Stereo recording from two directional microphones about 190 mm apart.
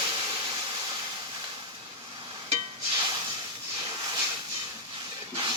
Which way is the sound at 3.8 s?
20° right (ahead or behind).